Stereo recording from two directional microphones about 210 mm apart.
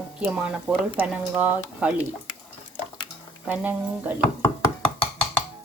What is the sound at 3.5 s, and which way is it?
Speech, 5° right (ahead or behind).